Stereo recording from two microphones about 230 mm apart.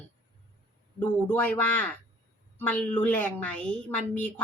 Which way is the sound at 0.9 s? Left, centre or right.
Centre.